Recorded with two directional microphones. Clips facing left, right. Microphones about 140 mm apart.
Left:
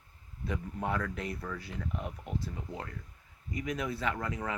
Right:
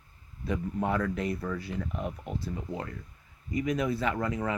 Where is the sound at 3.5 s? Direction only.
5° right (ahead or behind).